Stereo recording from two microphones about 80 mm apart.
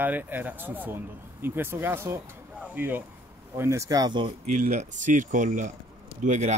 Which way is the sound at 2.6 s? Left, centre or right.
Right.